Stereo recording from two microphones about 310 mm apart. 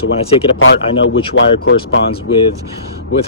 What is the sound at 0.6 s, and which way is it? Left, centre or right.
Speech, left.